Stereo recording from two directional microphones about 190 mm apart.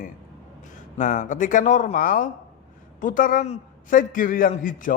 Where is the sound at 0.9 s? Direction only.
40° left (ahead or behind).